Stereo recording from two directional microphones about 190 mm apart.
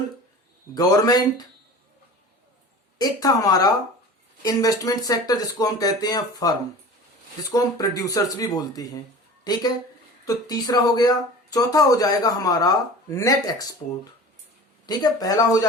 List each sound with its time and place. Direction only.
0.7 s speech: 20° left (ahead or behind)
3.0 s a woman's voice: 20° left (ahead or behind)
14.8 s speech: 20° left (ahead or behind)